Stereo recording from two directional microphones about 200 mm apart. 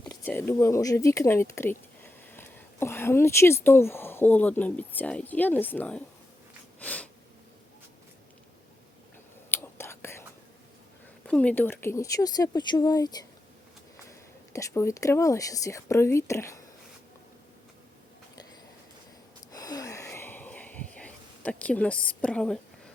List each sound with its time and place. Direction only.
0.0 s speech: 15° left (ahead or behind)
6.7 s snort: 5° left (ahead or behind)
9.5 s whispering: 10° left (ahead or behind)
11.3 s speech: 5° left (ahead or behind)
19.5 s a sound: 20° left (ahead or behind)